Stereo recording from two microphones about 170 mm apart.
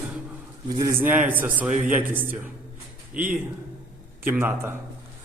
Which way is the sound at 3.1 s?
55° right (ahead or behind).